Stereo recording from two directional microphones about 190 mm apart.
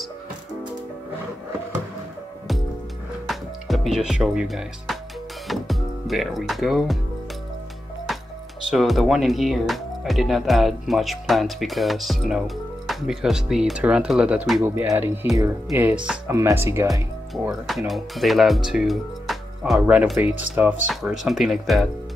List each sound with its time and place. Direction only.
3.3 s speech: centre (ahead or behind)
5.5 s music: centre (ahead or behind)
8.6 s speech: centre (ahead or behind)
17.5 s speech: centre (ahead or behind)